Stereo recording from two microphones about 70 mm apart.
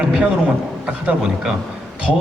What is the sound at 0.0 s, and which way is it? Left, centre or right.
Speech, centre.